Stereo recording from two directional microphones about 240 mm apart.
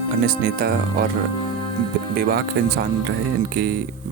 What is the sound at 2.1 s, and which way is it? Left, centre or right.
Speech, right.